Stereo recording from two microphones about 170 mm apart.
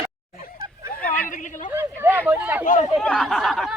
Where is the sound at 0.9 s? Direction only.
10° left (ahead or behind).